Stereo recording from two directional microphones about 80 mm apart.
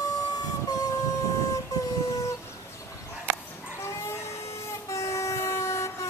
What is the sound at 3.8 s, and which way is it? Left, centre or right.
Dog, left.